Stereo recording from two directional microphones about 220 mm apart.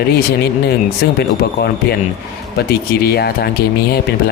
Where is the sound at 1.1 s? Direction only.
45° left (ahead or behind).